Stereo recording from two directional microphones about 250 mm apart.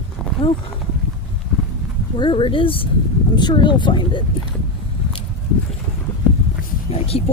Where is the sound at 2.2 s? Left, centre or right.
Centre.